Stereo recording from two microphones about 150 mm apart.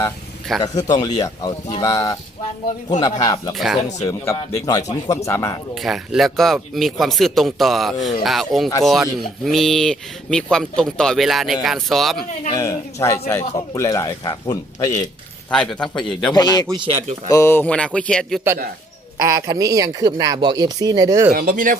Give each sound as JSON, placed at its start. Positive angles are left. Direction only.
{"t": 0.6, "sound": "a man's voice", "side_deg": 25}
{"t": 5.7, "sound": "speech", "side_deg": 0}
{"t": 12.5, "sound": "a man's voice", "side_deg": 20}
{"t": 15.4, "sound": "speech", "side_deg": 5}
{"t": 16.3, "sound": "a man's voice", "side_deg": 25}
{"t": 19.2, "sound": "speech", "side_deg": -20}
{"t": 21.3, "sound": "speech", "side_deg": -70}